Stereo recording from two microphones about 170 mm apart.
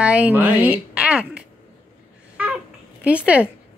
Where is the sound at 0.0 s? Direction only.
5° right (ahead or behind).